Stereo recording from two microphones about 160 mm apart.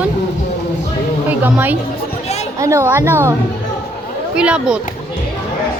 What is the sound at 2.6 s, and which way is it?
Speech, 15° right (ahead or behind).